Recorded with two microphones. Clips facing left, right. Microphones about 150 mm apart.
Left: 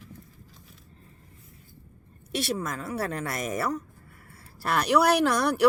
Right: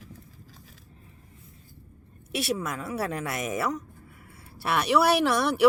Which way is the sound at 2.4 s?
5° right (ahead or behind).